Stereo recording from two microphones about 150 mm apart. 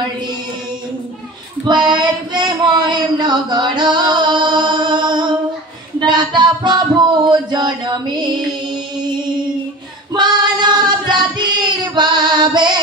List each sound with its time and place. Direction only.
1.7 s a sound: 30° right (ahead or behind)
5.9 s music: 30° right (ahead or behind)
7.2 s chant: 30° right (ahead or behind)
10.1 s singing: 30° right (ahead or behind)